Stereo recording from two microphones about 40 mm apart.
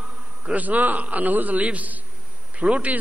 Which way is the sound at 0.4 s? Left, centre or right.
Right.